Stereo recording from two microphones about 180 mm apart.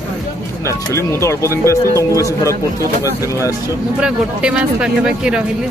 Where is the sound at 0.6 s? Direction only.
15° left (ahead or behind).